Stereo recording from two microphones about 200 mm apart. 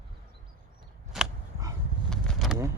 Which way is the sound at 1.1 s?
Centre (ahead or behind).